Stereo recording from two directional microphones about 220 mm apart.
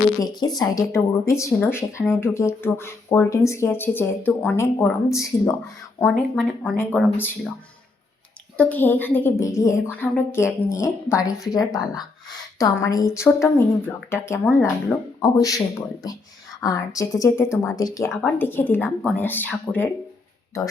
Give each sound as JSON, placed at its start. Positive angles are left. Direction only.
{"t": 0.2, "sound": "speech", "side_deg": 15}
{"t": 8.5, "sound": "speech", "side_deg": 10}